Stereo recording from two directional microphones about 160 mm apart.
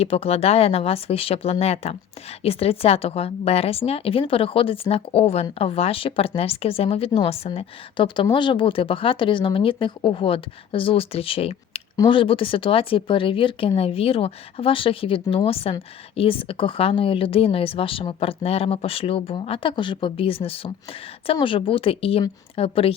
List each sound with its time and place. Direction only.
0.0 s a woman's voice: 40° left (ahead or behind)